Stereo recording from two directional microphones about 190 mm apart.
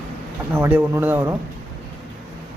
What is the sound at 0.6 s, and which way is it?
Speech, 10° right (ahead or behind).